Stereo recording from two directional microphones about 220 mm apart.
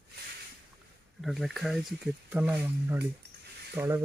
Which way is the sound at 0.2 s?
45° right (ahead or behind).